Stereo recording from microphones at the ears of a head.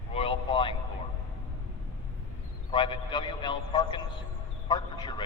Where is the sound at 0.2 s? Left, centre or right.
Left.